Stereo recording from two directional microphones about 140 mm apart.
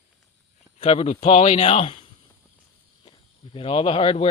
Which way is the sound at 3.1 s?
40° left (ahead or behind).